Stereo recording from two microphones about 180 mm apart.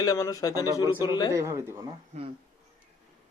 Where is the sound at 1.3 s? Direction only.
15° right (ahead or behind).